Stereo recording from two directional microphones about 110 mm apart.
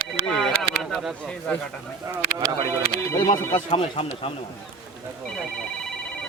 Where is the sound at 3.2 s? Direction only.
40° left (ahead or behind).